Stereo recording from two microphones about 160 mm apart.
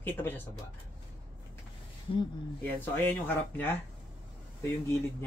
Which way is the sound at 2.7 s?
10° left (ahead or behind).